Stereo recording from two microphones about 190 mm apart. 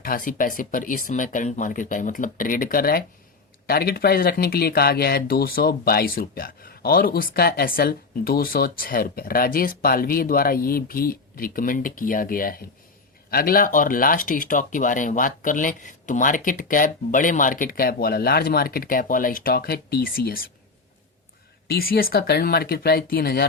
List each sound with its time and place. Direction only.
0.0 s speech: 45° left (ahead or behind)
21.7 s speech: 50° left (ahead or behind)